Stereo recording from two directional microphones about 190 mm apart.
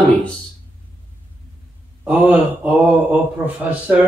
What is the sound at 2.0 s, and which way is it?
Speech, 10° right (ahead or behind).